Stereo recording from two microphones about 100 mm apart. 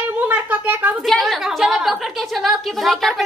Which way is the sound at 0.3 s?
15° right (ahead or behind).